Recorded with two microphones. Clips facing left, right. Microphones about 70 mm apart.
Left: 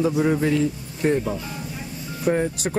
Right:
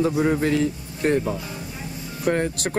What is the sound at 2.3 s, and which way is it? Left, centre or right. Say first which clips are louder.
Speech: left 1 dB; right.